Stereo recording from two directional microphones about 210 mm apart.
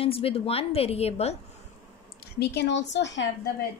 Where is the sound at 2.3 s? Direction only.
50° left (ahead or behind).